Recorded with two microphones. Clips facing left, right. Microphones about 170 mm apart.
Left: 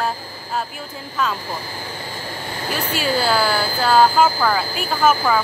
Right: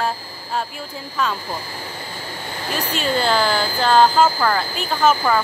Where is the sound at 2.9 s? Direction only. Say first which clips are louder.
Even; 5° left (ahead or behind).